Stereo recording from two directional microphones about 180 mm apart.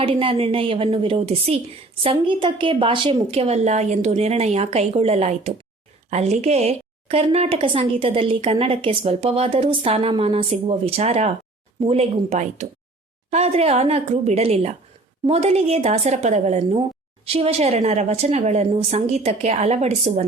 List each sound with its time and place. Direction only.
0.0 s speech: 30° right (ahead or behind)